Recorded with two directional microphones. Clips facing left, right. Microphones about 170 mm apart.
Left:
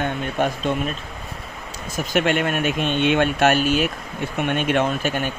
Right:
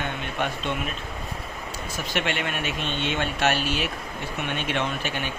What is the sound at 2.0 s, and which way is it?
Speech, 45° left (ahead or behind).